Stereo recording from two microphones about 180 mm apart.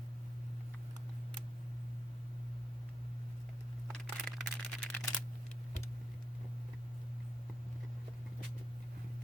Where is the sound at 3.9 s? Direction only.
5° left (ahead or behind).